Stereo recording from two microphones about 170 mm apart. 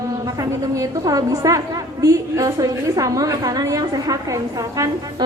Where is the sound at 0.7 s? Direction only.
20° right (ahead or behind).